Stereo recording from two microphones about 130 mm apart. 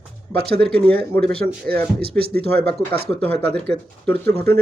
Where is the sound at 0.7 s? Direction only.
10° left (ahead or behind).